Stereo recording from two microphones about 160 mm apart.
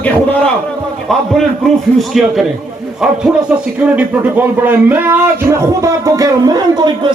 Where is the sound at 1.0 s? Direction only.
Centre (ahead or behind).